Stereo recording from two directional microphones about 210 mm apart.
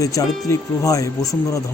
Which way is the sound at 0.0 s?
15° left (ahead or behind).